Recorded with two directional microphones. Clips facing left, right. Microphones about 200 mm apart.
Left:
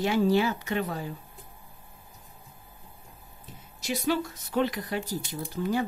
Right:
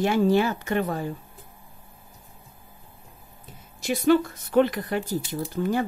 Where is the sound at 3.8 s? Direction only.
55° right (ahead or behind).